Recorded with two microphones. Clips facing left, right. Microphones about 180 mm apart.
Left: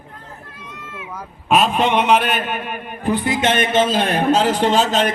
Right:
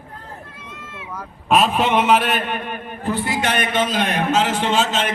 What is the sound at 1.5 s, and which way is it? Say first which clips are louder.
A man's voice: left 1 dB; centre (ahead or behind).